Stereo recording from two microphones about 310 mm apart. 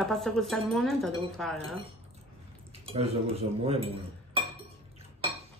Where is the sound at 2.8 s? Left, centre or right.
Centre.